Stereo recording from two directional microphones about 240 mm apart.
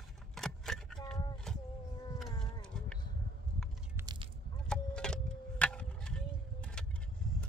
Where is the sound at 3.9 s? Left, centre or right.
Centre.